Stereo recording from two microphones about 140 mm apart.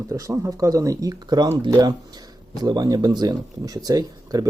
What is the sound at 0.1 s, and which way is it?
Speech, 20° right (ahead or behind).